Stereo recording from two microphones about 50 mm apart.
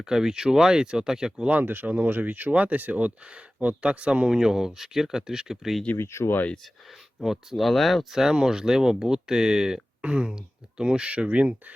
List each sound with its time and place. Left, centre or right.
0.0 s speech: centre
1.5 s speech: right
4.4 s speech: centre
6.0 s speech: left
7.3 s speech: centre
10.0 s speech: right